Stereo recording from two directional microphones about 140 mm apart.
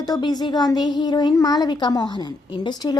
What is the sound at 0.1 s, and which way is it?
A woman's voice, 30° left (ahead or behind).